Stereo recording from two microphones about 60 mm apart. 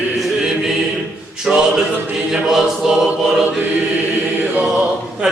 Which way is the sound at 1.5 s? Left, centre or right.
Centre.